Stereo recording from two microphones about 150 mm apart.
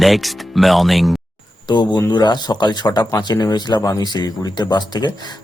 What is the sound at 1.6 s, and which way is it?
Speech, 30° left (ahead or behind).